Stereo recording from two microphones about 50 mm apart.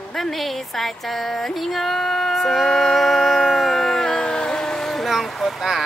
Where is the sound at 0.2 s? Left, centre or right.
Centre.